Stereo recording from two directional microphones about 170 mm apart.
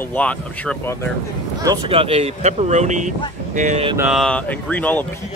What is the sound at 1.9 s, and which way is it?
Speech, 35° right (ahead or behind).